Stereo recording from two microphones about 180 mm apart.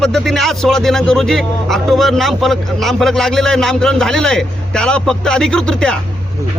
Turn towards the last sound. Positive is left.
turn(degrees=5)  # may be behind; listen again after turning